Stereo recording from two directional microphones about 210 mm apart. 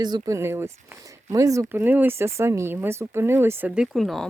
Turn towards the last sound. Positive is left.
turn(degrees=0)  # may be behind; listen again after turning